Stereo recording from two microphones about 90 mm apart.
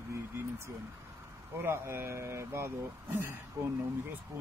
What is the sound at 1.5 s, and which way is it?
Speech, 30° right (ahead or behind).